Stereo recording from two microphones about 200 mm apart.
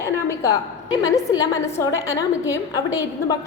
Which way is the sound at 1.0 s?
15° left (ahead or behind).